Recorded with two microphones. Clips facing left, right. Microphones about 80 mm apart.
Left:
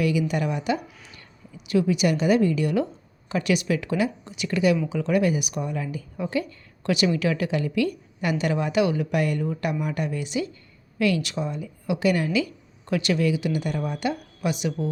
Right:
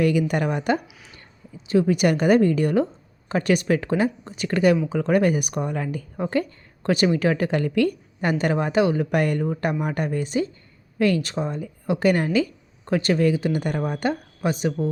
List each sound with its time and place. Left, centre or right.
0.0 s a woman's voice: right
1.5 s a woman's voice: right
1.9 s a woman's voice: right
9.0 s a woman's voice: right